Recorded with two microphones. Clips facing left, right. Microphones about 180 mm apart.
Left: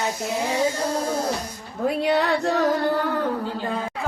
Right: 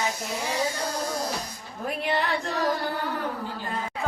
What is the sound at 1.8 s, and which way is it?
Speech, 80° left.